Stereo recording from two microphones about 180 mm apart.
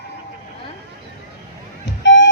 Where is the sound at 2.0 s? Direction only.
80° left.